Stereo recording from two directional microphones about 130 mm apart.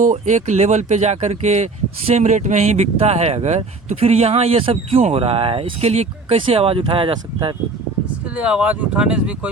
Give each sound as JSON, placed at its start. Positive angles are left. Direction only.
{"t": 0.0, "sound": "speech", "side_deg": -70}
{"t": 8.4, "sound": "speech", "side_deg": -10}